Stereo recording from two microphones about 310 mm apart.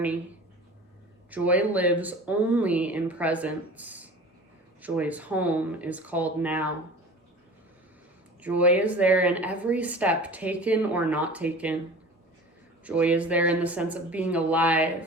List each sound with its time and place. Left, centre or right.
1.3 s speech: centre
8.4 s speech: centre
12.8 s speech: centre